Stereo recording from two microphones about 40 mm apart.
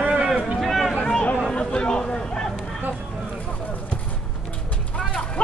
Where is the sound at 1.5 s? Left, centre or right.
Left.